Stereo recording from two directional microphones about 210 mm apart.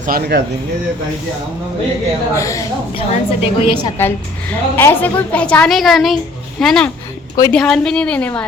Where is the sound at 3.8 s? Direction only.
10° left (ahead or behind).